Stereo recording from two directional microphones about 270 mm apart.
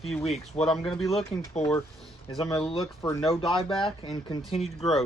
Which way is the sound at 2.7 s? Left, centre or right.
Centre.